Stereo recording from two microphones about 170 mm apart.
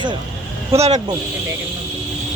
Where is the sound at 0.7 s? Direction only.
40° right (ahead or behind).